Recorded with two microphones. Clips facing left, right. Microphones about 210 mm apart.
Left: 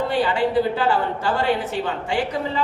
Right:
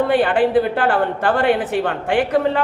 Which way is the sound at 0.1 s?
55° right (ahead or behind).